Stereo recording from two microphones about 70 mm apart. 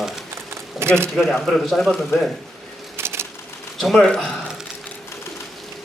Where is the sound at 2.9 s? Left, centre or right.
Right.